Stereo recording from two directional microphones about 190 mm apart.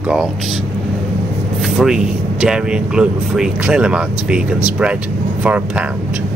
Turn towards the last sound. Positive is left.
turn(degrees=-5)  # may be behind; listen again after turning